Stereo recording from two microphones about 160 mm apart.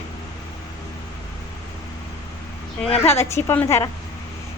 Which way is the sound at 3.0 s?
15° left (ahead or behind).